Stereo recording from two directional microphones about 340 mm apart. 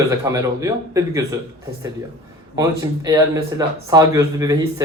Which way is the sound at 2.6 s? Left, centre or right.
Centre.